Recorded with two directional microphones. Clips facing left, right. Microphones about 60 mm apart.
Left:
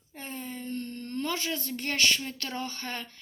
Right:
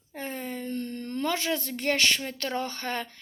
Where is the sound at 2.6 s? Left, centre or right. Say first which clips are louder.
Right 5 dB; right.